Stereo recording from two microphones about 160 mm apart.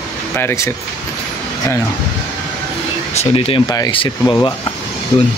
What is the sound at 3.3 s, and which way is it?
Speech, 35° left (ahead or behind).